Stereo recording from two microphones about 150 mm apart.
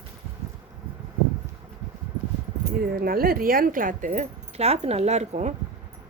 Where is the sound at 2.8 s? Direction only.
80° right; by 4.1 s 65° right (ahead or behind).